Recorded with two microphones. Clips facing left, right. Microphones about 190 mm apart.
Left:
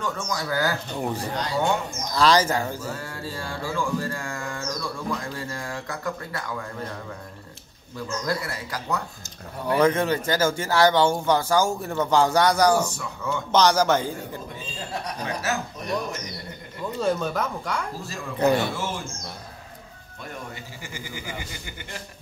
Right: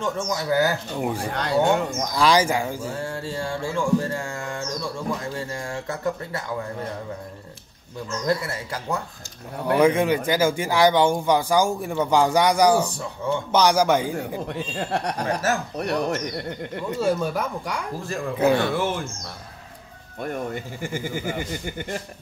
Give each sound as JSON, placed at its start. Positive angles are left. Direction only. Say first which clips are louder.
{"t": 0.0, "sound": "a sound", "louder": "right 3 dB", "side_deg": -20}
{"t": 1.0, "sound": "speech", "louder": "right 2 dB", "side_deg": -10}
{"t": 1.3, "sound": "speech", "louder": "right 4 dB", "side_deg": -60}
{"t": 2.1, "sound": "speech", "louder": "even", "side_deg": -10}
{"t": 2.8, "sound": "a sound", "louder": "right 4 dB", "side_deg": -30}
{"t": 8.3, "sound": "a sound", "louder": "right 6 dB", "side_deg": -25}
{"t": 9.8, "sound": "speech", "louder": "right 2 dB", "side_deg": -10}
{"t": 12.9, "sound": "a sound", "louder": "right 4 dB", "side_deg": -30}
{"t": 13.5, "sound": "speech", "louder": "even", "side_deg": -10}
{"t": 14.5, "sound": "speech", "louder": "right 7 dB", "side_deg": -70}
{"t": 17.0, "sound": "speech", "louder": "right 1 dB", "side_deg": -10}
{"t": 18.0, "sound": "speech", "louder": "right 2 dB", "side_deg": -55}
{"t": 20.2, "sound": "speech", "louder": "right 9 dB", "side_deg": -55}